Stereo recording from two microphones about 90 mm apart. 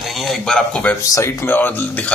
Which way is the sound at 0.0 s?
Centre (ahead or behind).